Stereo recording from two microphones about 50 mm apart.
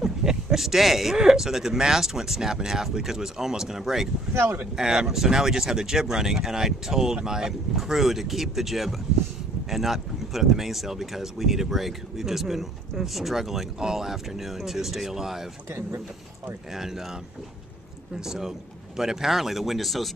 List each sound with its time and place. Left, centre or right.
0.0 s speech: centre
4.3 s speech: right
4.7 s speech: centre
16.7 s speech: centre
18.2 s speech: centre